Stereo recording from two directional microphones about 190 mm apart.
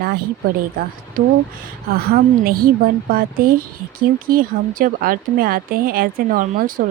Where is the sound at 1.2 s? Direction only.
45° right (ahead or behind).